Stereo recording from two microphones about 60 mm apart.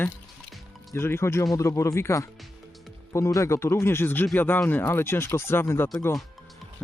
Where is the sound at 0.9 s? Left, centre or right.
Left.